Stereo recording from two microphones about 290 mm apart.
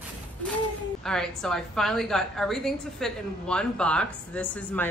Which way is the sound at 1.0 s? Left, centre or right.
Centre.